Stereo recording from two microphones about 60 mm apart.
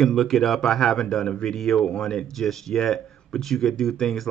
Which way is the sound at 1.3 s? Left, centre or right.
Centre.